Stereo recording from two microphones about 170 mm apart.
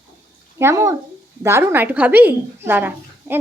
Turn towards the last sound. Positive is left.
turn(degrees=-10)  # may be behind; listen again after turning